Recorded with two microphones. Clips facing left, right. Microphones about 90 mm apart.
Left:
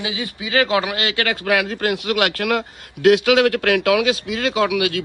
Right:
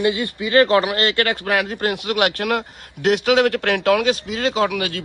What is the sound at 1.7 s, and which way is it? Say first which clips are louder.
Speech: left 1 dB; 20° right (ahead or behind).